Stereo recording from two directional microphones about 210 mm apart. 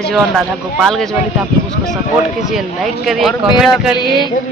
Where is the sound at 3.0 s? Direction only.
Centre (ahead or behind).